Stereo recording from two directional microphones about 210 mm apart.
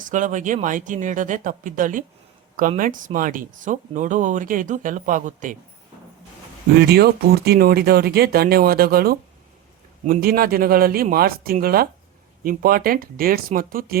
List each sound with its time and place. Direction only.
0.0 s speech: 35° right (ahead or behind)
6.7 s speech: 50° right (ahead or behind)